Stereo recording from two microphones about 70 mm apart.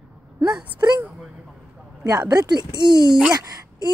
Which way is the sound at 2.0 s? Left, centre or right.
Right.